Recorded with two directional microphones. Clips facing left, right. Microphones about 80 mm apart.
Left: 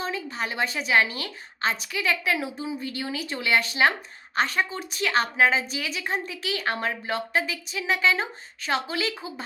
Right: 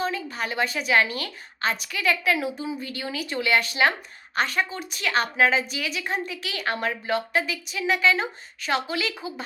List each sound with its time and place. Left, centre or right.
0.0 s a woman's voice: left